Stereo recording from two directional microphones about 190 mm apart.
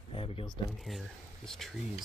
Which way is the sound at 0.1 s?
30° left (ahead or behind).